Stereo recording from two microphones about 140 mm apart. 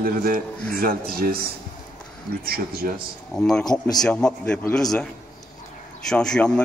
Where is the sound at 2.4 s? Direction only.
90° right.